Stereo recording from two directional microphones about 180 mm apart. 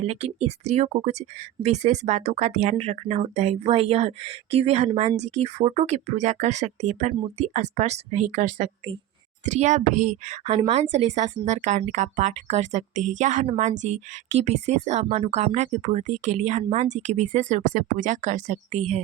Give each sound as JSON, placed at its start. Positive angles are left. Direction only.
{"t": 0.0, "sound": "a woman's voice", "side_deg": -35}